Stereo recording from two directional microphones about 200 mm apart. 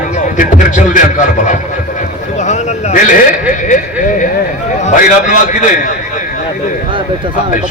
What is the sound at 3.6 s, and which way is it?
A man's voice, 40° left (ahead or behind).